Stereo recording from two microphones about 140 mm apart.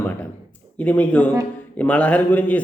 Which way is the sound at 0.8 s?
10° left (ahead or behind).